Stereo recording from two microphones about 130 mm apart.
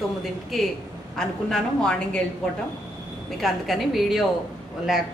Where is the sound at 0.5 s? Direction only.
Centre (ahead or behind).